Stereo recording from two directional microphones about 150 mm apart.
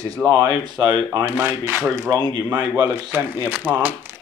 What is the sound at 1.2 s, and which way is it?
Speech, 15° right (ahead or behind).